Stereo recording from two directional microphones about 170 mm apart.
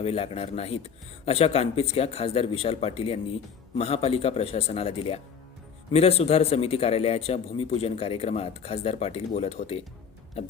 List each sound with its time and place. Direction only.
0.0 s speech: 35° left (ahead or behind)